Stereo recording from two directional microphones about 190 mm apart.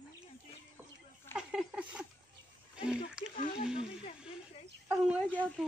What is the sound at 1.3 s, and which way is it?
Speech, 5° right (ahead or behind).